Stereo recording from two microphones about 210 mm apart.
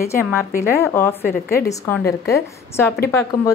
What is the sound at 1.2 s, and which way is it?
Speech, 45° left (ahead or behind).